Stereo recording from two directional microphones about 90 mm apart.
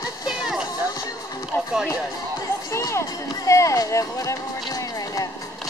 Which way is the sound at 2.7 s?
30° left (ahead or behind).